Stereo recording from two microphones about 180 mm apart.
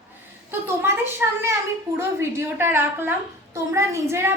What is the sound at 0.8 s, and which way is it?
A woman's voice, 15° right (ahead or behind).